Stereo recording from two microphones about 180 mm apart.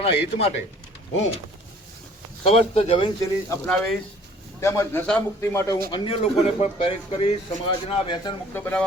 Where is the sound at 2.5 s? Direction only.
35° left (ahead or behind).